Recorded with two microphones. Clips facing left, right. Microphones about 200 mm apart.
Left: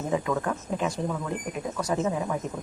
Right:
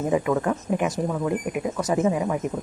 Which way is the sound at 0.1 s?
15° right (ahead or behind).